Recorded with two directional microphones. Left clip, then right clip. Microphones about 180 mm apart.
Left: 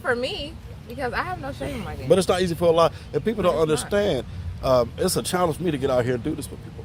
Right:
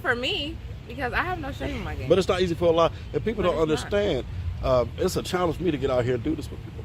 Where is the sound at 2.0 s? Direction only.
45° left (ahead or behind).